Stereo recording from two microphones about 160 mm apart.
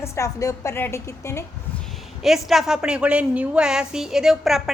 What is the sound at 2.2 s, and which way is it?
A woman's voice, centre (ahead or behind).